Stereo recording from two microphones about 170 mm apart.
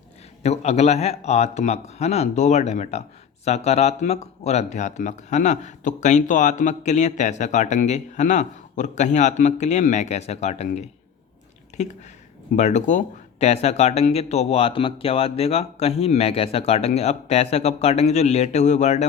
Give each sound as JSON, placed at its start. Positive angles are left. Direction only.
{"t": 0.4, "sound": "speech", "side_deg": 40}